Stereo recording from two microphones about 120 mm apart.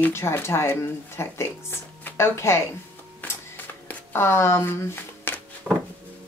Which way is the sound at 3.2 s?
15° left (ahead or behind).